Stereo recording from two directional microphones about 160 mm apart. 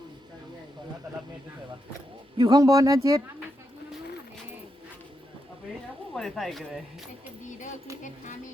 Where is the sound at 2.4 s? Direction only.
25° right (ahead or behind).